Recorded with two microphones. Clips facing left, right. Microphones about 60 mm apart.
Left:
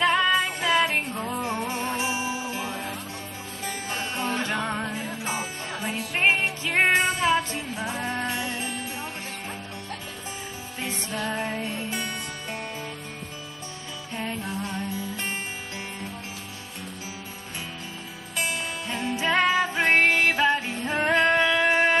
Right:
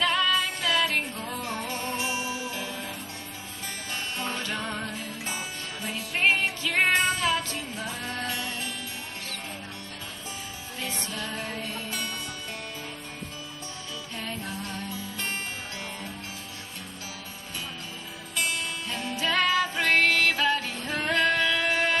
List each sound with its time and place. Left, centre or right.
0.0 s music: left
10.8 s music: left
14.1 s music: left
18.3 s music: left